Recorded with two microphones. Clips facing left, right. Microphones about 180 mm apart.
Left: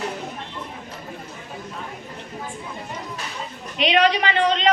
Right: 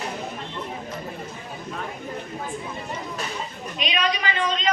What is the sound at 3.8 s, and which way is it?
Speech, 70° left (ahead or behind).